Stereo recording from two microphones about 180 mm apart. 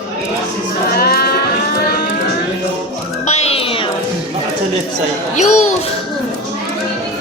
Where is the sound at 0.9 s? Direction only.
60° left (ahead or behind).